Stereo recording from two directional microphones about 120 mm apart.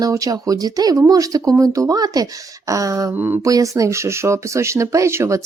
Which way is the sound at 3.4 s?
30° right (ahead or behind).